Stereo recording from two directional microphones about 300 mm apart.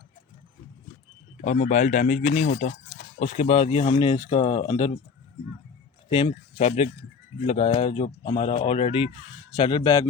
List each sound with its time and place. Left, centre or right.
1.5 s speech: left
6.1 s speech: centre